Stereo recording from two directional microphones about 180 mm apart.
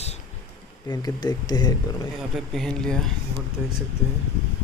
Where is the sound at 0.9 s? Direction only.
20° left (ahead or behind).